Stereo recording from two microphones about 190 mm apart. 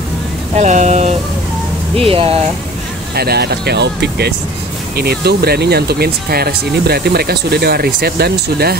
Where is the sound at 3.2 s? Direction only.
55° right (ahead or behind).